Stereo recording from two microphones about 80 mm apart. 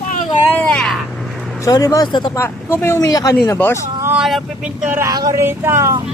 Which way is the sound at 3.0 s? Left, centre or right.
Left.